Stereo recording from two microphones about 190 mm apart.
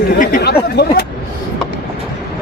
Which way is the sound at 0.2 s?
45° left (ahead or behind).